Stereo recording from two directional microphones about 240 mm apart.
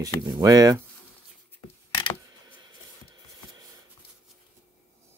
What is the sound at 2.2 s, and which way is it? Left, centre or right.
Mechanisms, centre.